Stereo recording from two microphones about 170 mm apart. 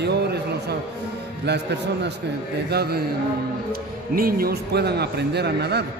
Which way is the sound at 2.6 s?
70° right (ahead or behind).